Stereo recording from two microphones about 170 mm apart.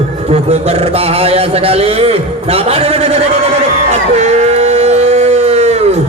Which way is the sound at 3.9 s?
40° right (ahead or behind).